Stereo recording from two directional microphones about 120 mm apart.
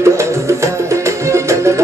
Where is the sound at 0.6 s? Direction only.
25° right (ahead or behind).